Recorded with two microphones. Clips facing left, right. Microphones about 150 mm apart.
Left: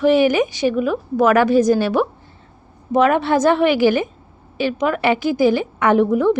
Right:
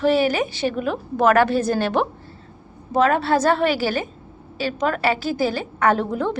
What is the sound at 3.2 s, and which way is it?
A woman's voice, 20° left (ahead or behind).